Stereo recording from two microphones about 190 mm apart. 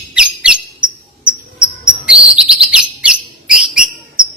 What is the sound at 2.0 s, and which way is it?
Bird, 5° right (ahead or behind).